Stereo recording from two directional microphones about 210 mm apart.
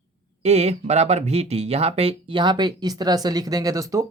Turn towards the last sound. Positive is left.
turn(degrees=-15)  # may be behind; listen again after turning